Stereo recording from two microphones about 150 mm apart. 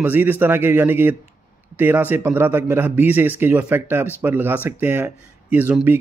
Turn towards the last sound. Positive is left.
turn(degrees=-10)  # may be behind; listen again after turning